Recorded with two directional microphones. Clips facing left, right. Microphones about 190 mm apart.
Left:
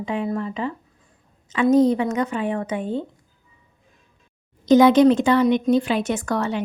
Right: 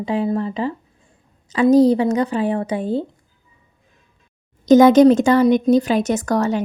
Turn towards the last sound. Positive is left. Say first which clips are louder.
# right 5 dB
turn(degrees=-40)  # may be behind; listen again after turning